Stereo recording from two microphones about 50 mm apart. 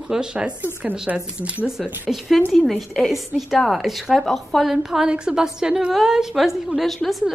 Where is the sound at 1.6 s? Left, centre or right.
Centre.